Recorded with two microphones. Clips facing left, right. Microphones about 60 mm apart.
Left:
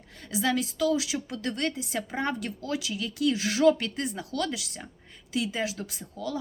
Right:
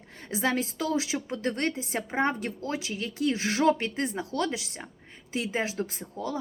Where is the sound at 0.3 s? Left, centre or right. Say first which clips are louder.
Even; right.